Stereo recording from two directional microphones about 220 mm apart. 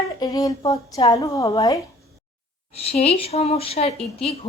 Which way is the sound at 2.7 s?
25° left (ahead or behind).